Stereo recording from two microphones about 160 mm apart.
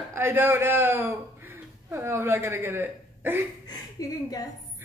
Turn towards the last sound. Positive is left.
turn(degrees=20)  # may be behind; listen again after turning